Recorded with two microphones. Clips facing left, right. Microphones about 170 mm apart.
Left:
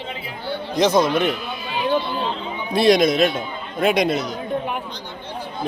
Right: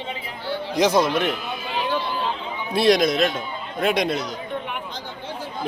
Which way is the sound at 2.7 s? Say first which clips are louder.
Left 2 dB; centre (ahead or behind).